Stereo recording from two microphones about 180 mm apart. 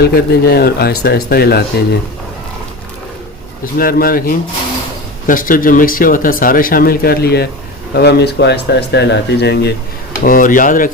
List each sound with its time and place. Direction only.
0.0 s speech: 60° left (ahead or behind)
3.8 s speech: 55° left (ahead or behind)
10.2 s speech: 50° left (ahead or behind)